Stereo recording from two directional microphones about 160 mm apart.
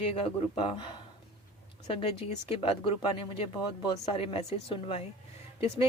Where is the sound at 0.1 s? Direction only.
35° left (ahead or behind).